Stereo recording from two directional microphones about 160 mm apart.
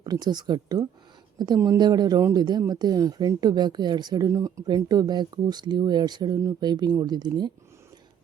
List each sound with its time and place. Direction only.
0.0 s speech: 25° right (ahead or behind)